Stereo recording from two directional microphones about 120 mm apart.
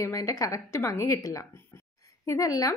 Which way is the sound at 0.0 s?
25° left (ahead or behind).